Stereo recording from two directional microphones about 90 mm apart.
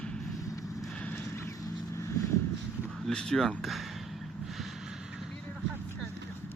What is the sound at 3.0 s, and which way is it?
Speech, 5° left (ahead or behind).